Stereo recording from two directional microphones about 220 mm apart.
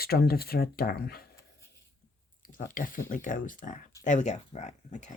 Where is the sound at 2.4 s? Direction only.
40° left (ahead or behind).